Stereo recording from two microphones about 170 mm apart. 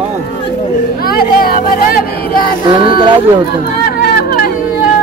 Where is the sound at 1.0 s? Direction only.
60° left (ahead or behind).